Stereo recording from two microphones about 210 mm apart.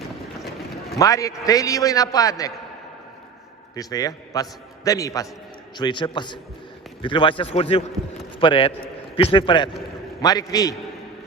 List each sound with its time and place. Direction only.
0.9 s a man's voice: 15° left (ahead or behind)
3.8 s a man's voice: 15° left (ahead or behind)